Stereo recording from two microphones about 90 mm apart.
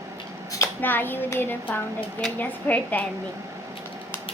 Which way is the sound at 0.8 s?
20° left (ahead or behind).